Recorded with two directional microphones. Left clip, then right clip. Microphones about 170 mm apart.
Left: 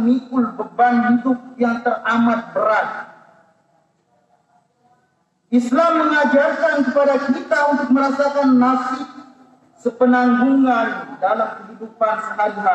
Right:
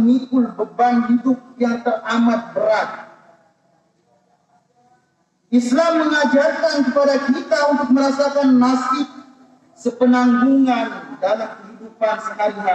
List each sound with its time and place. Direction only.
0.0 s a man's voice: 15° right (ahead or behind)
5.5 s a man's voice: 15° right (ahead or behind)